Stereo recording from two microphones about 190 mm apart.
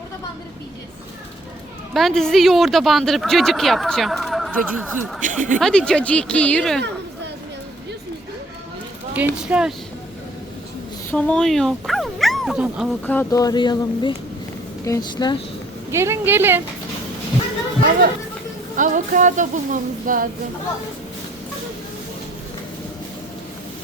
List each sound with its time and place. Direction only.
1.9 s speech: centre (ahead or behind)
5.2 s speech: 40° right (ahead or behind)
5.5 s speech: 5° left (ahead or behind)
9.1 s speech: 5° right (ahead or behind)
11.1 s speech: 5° left (ahead or behind)
13.1 s speech: 15° left (ahead or behind)
15.9 s speech: 15° right (ahead or behind)
18.8 s music: 40° right (ahead or behind)